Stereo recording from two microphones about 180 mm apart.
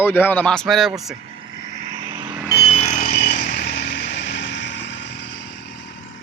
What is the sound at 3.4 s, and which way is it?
Vehicle, 70° left (ahead or behind).